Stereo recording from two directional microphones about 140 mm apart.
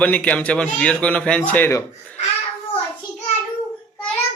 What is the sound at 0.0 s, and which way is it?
A man's voice, 10° left (ahead or behind).